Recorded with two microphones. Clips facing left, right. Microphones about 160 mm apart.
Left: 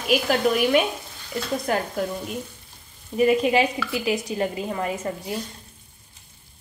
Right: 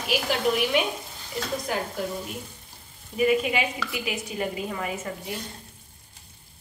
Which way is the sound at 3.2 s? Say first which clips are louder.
Left 4 dB; 40° left (ahead or behind).